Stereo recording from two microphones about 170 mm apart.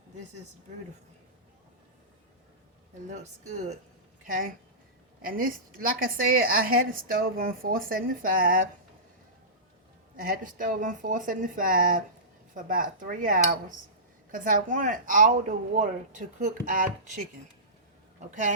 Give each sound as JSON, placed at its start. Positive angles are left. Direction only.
{"t": 3.1, "sound": "a woman's voice", "side_deg": -40}
{"t": 4.3, "sound": "a woman's voice", "side_deg": -55}
{"t": 10.2, "sound": "a woman's voice", "side_deg": -55}